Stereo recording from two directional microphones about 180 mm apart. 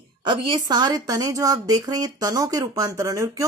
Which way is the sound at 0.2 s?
25° right (ahead or behind).